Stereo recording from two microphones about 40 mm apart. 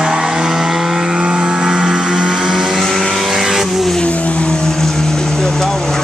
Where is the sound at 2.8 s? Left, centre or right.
Centre.